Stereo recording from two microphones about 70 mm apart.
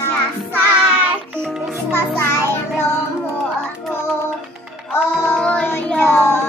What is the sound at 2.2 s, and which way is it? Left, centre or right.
Child singing, left.